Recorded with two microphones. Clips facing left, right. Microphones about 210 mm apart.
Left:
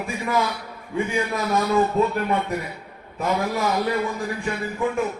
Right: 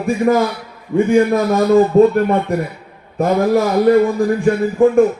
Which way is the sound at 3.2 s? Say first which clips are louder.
Right 10 dB; 50° right (ahead or behind).